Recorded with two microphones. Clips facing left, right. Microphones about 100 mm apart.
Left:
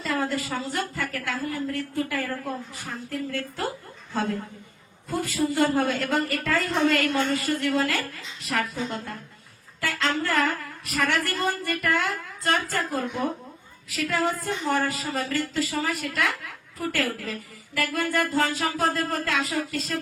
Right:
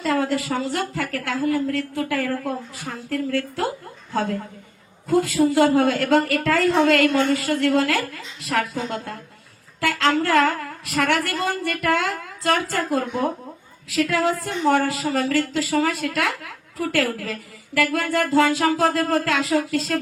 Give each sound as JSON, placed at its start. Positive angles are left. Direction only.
{"t": 0.0, "sound": "a woman's voice", "side_deg": -70}